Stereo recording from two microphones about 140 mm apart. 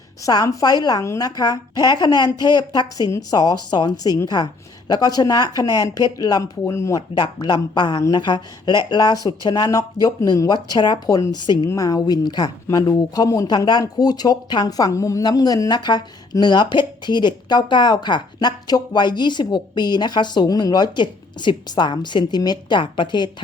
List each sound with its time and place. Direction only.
0.3 s speech: 25° left (ahead or behind)